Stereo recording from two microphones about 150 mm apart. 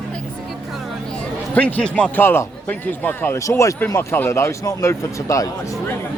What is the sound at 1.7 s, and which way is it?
Speech, 10° left (ahead or behind).